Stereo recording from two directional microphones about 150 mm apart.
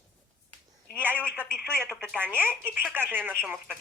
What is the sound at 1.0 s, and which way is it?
Speech, 15° right (ahead or behind).